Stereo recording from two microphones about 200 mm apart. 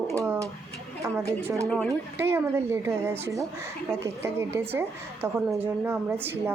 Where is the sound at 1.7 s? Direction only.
5° left (ahead or behind).